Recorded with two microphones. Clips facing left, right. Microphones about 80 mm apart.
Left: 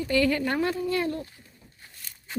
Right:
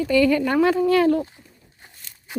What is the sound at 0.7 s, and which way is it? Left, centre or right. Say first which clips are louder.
Speech: right 10 dB; right.